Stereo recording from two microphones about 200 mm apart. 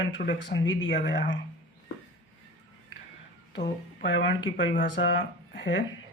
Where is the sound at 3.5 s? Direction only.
60° left (ahead or behind).